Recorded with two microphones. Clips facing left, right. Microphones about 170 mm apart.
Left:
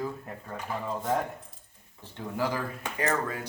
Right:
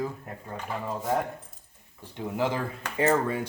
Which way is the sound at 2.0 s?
15° right (ahead or behind).